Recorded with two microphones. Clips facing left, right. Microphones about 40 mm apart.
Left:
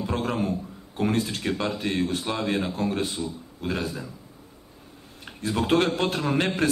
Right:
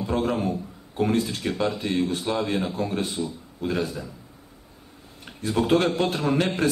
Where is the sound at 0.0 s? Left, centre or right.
Left.